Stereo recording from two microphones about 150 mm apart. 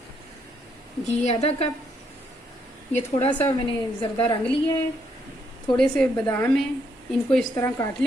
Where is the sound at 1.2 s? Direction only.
45° left (ahead or behind).